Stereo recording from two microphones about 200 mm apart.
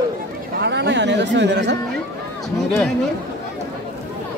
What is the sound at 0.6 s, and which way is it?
Speech, 60° right (ahead or behind).